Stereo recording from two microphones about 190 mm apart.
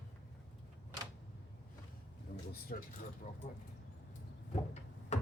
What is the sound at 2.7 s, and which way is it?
Speech, 50° left (ahead or behind).